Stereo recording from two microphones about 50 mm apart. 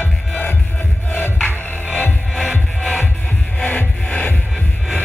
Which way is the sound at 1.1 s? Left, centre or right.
Left.